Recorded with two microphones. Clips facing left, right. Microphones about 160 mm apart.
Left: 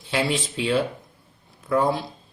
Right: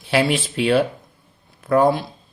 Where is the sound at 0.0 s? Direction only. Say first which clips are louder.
Right 5 dB; 70° right (ahead or behind).